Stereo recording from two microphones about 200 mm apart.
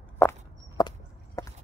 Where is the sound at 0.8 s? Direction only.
20° left (ahead or behind).